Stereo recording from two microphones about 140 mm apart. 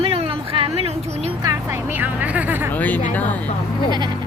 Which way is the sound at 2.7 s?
10° left (ahead or behind).